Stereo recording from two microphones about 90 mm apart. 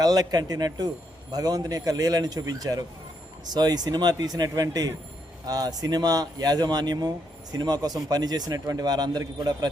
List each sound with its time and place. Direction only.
0.0 s speech: 45° right (ahead or behind)